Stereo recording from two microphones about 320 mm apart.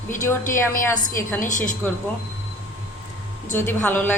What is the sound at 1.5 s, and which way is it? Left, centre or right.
Speech, left.